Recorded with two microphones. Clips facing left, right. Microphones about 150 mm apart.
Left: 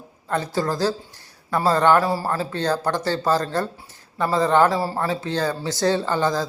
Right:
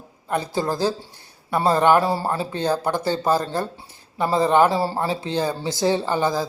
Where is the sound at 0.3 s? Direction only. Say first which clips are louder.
Even; 15° right (ahead or behind).